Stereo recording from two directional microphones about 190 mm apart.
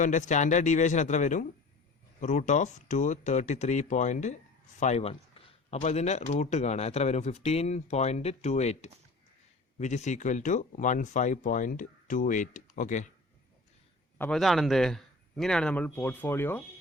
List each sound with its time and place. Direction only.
0.0 s speech: 40° left (ahead or behind)
14.2 s a man's voice: 5° left (ahead or behind)